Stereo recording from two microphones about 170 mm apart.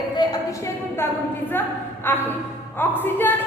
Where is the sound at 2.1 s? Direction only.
10° left (ahead or behind).